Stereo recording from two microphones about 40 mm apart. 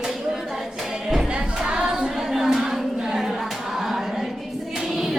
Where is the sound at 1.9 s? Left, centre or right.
Centre.